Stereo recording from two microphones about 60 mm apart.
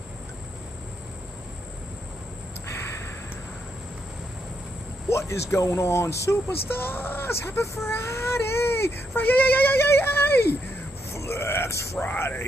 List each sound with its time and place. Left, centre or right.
5.1 s speech: left
11.1 s a sound: left
12.1 s speech: left